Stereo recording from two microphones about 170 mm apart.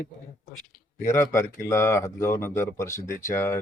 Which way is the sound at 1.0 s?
15° left (ahead or behind).